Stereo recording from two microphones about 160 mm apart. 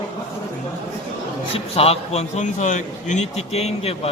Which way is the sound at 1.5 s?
35° left (ahead or behind).